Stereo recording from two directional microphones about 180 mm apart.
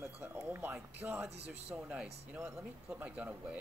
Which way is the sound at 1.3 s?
35° right (ahead or behind).